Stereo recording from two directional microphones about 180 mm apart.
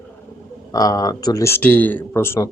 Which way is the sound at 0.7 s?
20° left (ahead or behind).